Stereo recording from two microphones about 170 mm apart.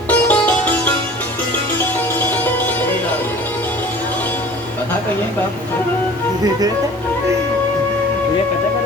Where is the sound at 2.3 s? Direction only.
10° left (ahead or behind).